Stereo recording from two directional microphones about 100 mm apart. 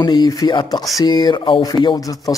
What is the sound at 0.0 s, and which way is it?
Speech, 45° left (ahead or behind).